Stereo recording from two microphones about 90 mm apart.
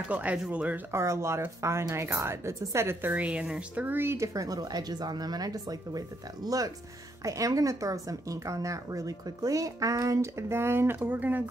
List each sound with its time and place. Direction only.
0.1 s speech: 15° right (ahead or behind)
0.9 s speech: 30° right (ahead or behind)
4.3 s speech: 40° right (ahead or behind); by 11.4 s 20° right (ahead or behind)